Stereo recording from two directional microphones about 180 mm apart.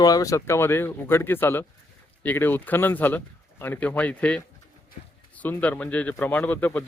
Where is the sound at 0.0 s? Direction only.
20° left (ahead or behind).